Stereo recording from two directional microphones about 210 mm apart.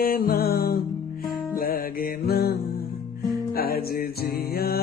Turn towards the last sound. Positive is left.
turn(degrees=45)  # may be behind; listen again after turning